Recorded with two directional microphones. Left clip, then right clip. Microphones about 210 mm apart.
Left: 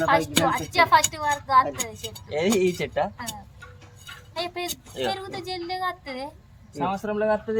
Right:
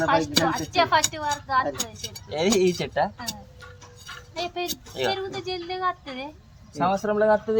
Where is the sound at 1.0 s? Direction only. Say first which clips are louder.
Left 2 dB; centre (ahead or behind).